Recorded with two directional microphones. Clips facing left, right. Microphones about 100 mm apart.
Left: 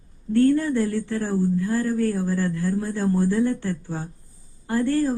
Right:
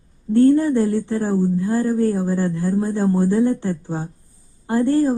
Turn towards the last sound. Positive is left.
turn(degrees=-20)  # may be behind; listen again after turning